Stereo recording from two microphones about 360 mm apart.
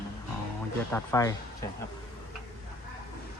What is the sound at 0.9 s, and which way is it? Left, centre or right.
Speech, centre.